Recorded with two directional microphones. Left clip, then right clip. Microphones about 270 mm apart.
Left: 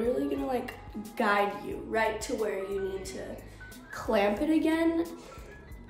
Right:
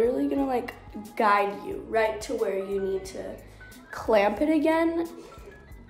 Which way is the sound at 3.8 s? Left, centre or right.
Centre.